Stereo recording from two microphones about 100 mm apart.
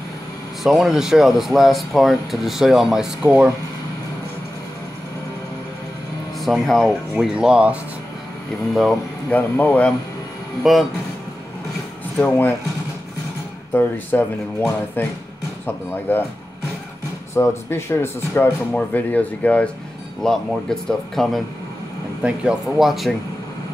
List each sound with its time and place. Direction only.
0.7 s speech: centre (ahead or behind)
3.3 s speech: 25° right (ahead or behind)
6.4 s speech: centre (ahead or behind)
7.3 s speech: 10° right (ahead or behind)
9.3 s speech: 15° left (ahead or behind)
10.6 s speech: centre (ahead or behind)
12.2 s speech: 20° left (ahead or behind)
13.7 s speech: 20° left (ahead or behind)
17.3 s speech: 25° left (ahead or behind); by 21.4 s 5° left (ahead or behind)
22.2 s speech: 10° right (ahead or behind)